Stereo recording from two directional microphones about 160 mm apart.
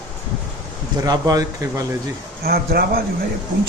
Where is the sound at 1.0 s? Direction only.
20° right (ahead or behind).